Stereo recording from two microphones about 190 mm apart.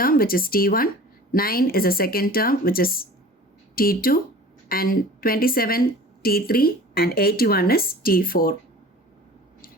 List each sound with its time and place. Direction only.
0.0 s speech: 50° left (ahead or behind)